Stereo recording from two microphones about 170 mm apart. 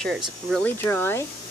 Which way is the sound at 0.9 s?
15° left (ahead or behind).